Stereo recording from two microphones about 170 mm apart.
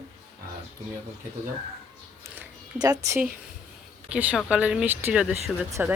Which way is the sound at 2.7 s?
20° right (ahead or behind).